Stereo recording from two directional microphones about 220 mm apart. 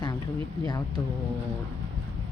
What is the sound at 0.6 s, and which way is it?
Speech, 20° left (ahead or behind).